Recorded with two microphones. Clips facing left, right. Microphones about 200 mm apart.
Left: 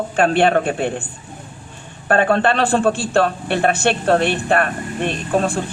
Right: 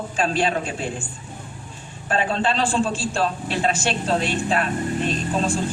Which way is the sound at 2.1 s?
60° left (ahead or behind).